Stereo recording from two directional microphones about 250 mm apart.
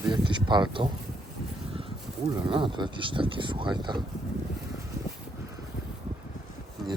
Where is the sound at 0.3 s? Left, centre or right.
Centre.